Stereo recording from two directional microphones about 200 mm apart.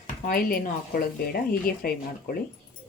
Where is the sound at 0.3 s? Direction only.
45° left (ahead or behind).